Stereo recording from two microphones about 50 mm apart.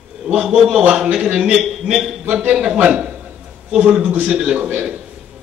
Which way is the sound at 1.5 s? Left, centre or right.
Centre.